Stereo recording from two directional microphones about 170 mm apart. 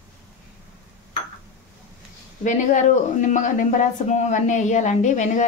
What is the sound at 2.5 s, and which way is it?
Speech, 45° left (ahead or behind).